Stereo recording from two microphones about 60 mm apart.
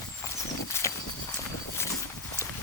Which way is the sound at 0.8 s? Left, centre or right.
Left.